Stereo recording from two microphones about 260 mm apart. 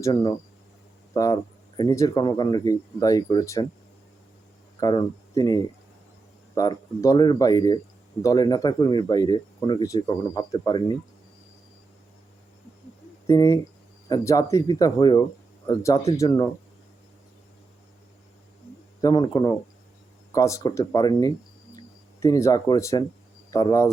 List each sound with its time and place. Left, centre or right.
0.0 s speech: centre
4.8 s speech: centre
13.2 s speech: centre
19.0 s speech: centre